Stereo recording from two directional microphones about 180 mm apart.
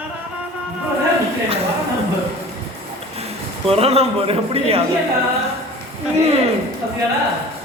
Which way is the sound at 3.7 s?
35° right (ahead or behind).